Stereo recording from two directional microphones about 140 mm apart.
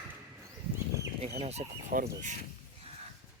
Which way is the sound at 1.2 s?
50° right (ahead or behind).